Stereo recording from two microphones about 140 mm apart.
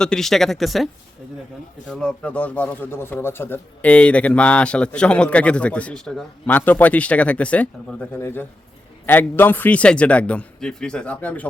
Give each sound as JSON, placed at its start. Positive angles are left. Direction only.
{"t": 0.0, "sound": "speech", "side_deg": 5}
{"t": 1.9, "sound": "a man's voice", "side_deg": 5}